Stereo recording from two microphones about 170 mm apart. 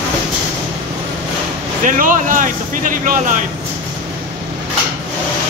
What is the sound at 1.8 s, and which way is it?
Speech, 50° right (ahead or behind).